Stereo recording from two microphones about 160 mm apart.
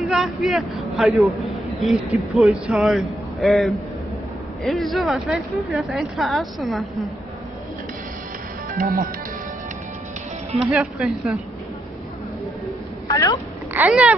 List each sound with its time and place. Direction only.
0.0 s speech: centre (ahead or behind)
8.7 s speech: 65° right (ahead or behind)
10.7 s speech: 5° right (ahead or behind)
13.1 s speech: 25° left (ahead or behind)
13.7 s a sound: 10° right (ahead or behind)